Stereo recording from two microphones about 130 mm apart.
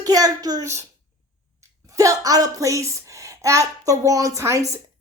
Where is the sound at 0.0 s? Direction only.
30° right (ahead or behind).